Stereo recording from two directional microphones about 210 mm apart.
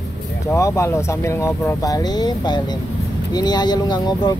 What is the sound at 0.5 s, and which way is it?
Speech, 15° left (ahead or behind).